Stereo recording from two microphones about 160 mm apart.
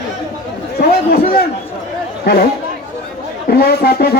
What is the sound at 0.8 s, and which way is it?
Speech, 75° left (ahead or behind).